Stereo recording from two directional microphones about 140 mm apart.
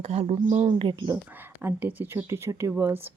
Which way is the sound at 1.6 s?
15° right (ahead or behind).